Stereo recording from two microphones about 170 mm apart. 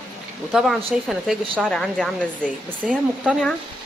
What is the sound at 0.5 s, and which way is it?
A woman's voice, centre (ahead or behind).